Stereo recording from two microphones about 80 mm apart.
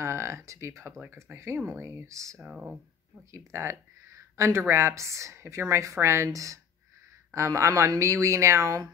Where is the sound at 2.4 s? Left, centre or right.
Centre.